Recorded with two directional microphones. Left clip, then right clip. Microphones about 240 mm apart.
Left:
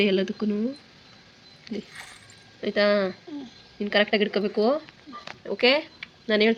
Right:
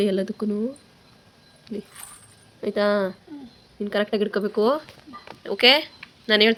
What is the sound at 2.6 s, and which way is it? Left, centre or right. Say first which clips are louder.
Speech: even; centre.